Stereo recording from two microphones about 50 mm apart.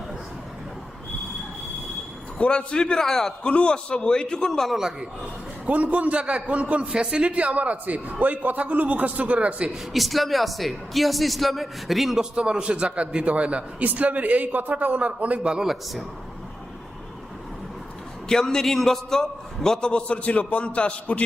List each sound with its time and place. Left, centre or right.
2.4 s a man's voice: left
3.4 s a man's voice: left
4.7 s a man's voice: centre
5.6 s a man's voice: right
6.8 s a man's voice: centre
9.9 s a man's voice: centre
12.2 s a man's voice: centre
13.8 s a man's voice: right
15.6 s a man's voice: centre
18.3 s a man's voice: centre